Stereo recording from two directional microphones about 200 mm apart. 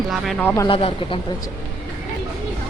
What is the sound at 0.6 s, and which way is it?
Speech, 25° left (ahead or behind).